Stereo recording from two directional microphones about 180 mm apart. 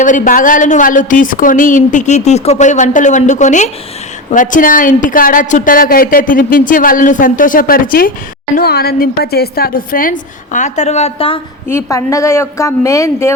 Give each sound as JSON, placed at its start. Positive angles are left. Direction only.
{"t": 0.0, "sound": "a woman's voice", "side_deg": 45}
{"t": 11.7, "sound": "a woman's voice", "side_deg": 15}